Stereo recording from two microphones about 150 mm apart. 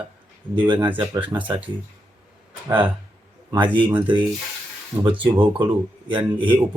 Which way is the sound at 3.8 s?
35° right (ahead or behind).